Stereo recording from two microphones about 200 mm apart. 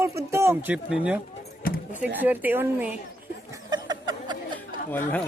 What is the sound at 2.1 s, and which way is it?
Speech, 10° right (ahead or behind).